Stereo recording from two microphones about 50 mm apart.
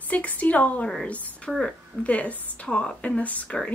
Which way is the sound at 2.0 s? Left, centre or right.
Left.